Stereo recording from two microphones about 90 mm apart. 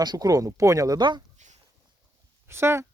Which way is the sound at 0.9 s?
55° right (ahead or behind).